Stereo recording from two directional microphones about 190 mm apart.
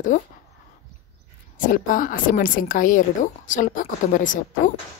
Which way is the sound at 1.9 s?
45° left (ahead or behind).